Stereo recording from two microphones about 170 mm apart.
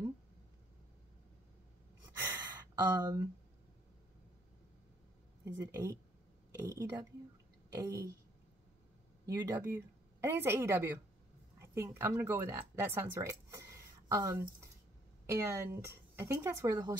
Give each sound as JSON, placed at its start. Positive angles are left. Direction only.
{"t": 2.1, "sound": "gasp", "side_deg": -25}
{"t": 5.4, "sound": "speech", "side_deg": -20}
{"t": 9.3, "sound": "speech", "side_deg": -15}